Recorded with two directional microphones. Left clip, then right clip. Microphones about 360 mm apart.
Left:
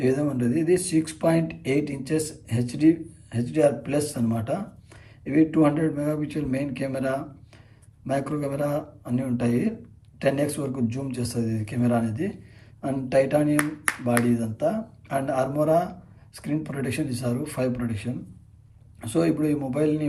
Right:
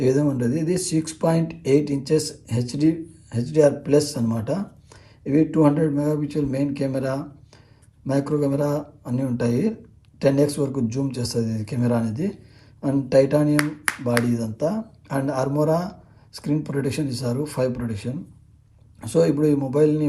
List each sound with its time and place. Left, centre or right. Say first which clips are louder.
0.0 s speech: right 3 dB; centre